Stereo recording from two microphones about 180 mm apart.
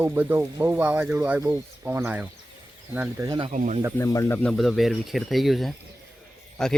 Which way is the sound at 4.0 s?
15° left (ahead or behind).